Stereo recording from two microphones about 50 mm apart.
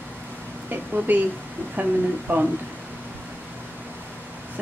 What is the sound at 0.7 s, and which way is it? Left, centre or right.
A woman's voice, right.